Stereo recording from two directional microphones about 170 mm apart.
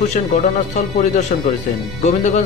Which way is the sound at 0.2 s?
50° left (ahead or behind).